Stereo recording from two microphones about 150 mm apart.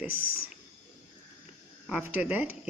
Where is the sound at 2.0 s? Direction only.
10° right (ahead or behind).